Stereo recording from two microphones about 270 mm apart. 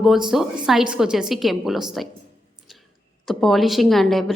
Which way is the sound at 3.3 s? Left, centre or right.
Centre.